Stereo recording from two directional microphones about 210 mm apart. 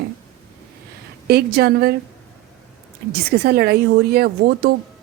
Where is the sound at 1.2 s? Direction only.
50° right (ahead or behind).